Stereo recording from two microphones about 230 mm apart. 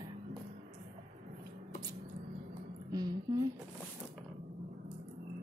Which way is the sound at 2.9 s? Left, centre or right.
Centre.